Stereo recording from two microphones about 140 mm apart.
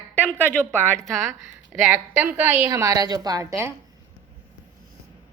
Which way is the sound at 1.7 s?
15° right (ahead or behind).